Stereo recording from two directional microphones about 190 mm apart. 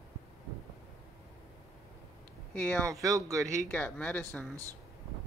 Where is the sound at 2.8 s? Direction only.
15° right (ahead or behind).